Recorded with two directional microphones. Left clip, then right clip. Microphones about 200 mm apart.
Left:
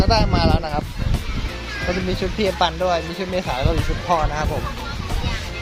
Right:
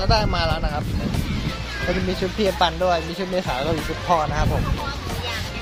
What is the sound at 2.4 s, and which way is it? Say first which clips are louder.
Speech: even; 10° left (ahead or behind).